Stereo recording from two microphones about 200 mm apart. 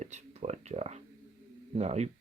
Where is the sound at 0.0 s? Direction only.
35° right (ahead or behind).